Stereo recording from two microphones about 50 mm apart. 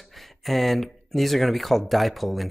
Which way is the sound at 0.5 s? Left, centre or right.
Centre.